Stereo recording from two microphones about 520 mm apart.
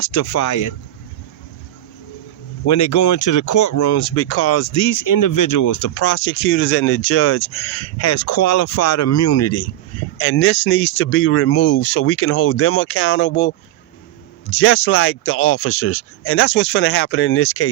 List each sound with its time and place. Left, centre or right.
0.0 s speech: left
2.6 s speech: left